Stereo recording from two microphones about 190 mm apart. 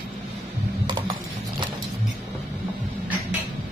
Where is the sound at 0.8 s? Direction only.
25° right (ahead or behind).